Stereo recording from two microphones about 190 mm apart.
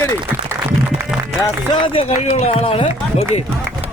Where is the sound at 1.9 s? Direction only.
30° left (ahead or behind).